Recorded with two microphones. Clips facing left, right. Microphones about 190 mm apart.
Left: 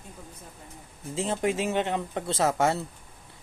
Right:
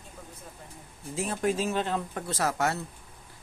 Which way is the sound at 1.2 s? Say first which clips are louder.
Left 1 dB; 20° left (ahead or behind).